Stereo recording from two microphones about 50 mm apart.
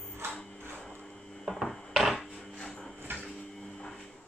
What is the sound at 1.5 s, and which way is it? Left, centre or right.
Dishes, centre.